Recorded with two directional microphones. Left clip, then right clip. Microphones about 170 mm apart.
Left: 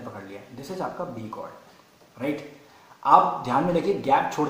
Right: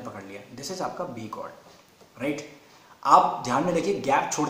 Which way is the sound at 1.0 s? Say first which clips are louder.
Even; 15° right (ahead or behind).